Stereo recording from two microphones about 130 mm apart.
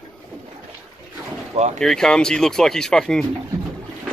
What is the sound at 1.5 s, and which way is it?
Vehicle, 60° right (ahead or behind).